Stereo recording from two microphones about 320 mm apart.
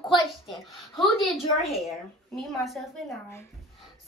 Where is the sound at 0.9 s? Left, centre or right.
Centre.